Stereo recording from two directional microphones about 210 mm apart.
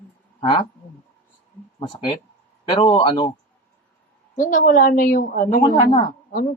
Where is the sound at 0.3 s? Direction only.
20° left (ahead or behind).